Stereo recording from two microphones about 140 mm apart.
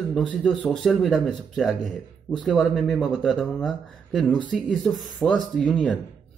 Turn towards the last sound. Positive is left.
turn(degrees=5)  # may be behind; listen again after turning